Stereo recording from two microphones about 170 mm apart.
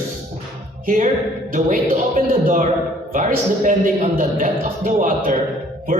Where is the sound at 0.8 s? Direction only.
55° right (ahead or behind).